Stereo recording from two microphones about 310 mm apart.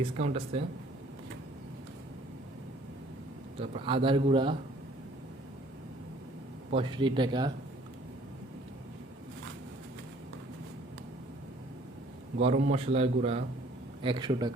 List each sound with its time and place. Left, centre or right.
0.0 s a man's voice: centre
3.6 s a man's voice: centre
6.7 s a man's voice: centre
12.4 s a man's voice: centre